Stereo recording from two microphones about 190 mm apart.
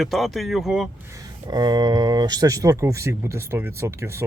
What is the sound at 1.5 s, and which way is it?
Speech, 20° right (ahead or behind).